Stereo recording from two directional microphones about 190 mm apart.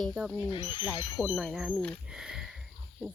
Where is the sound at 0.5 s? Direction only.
25° left (ahead or behind).